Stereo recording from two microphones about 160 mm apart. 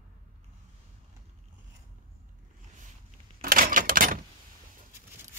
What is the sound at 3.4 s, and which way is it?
Cash register, 60° right (ahead or behind).